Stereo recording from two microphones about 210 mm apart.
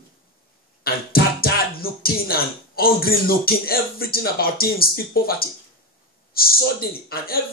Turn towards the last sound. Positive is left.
turn(degrees=45)  # may be behind; listen again after turning